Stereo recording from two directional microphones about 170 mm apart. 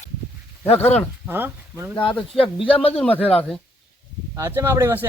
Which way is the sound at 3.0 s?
10° left (ahead or behind).